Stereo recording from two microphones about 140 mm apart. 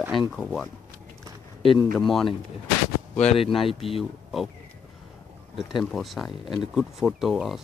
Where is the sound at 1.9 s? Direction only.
Centre (ahead or behind).